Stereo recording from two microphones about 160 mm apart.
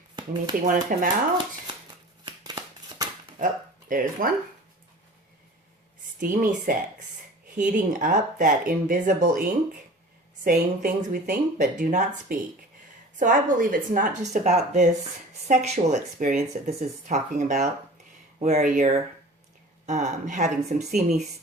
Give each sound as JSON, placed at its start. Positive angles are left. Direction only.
{"t": 0.6, "sound": "speech", "side_deg": -55}
{"t": 2.2, "sound": "scissors", "side_deg": -25}
{"t": 3.3, "sound": "speech", "side_deg": -60}
{"t": 6.1, "sound": "speech", "side_deg": -60}